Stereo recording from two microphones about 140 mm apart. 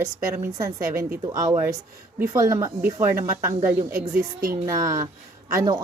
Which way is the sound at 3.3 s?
30° right (ahead or behind).